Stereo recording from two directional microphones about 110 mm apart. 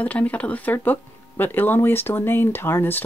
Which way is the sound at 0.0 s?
15° left (ahead or behind).